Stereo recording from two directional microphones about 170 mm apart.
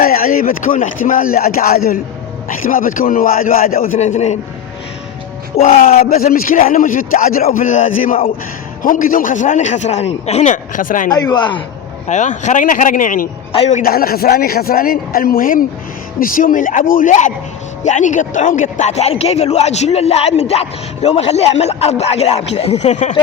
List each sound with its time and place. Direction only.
0.0 s speech: 60° left (ahead or behind)
3.9 s a man's voice: 40° left (ahead or behind)
5.5 s a man's voice: 35° left (ahead or behind)
6.1 s a man's voice: 60° left (ahead or behind)
11.1 s speech: 25° left (ahead or behind)
12.0 s a man's voice: 45° left (ahead or behind)
13.5 s a man's voice: 40° left (ahead or behind)
13.8 s a man's voice: 60° left (ahead or behind); by 23.1 s 45° left (ahead or behind)